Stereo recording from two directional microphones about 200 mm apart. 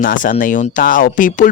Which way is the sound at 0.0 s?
40° left (ahead or behind).